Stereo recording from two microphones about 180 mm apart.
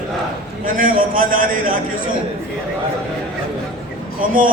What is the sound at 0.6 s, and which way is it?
A man's voice, 50° right (ahead or behind).